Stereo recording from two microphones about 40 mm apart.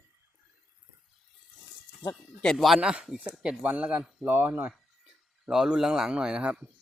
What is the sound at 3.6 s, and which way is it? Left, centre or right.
Speech, right.